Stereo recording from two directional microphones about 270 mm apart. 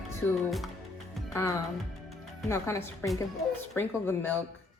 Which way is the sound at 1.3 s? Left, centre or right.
Centre.